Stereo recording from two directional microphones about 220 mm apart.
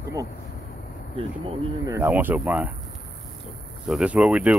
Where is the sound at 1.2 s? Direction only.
25° right (ahead or behind).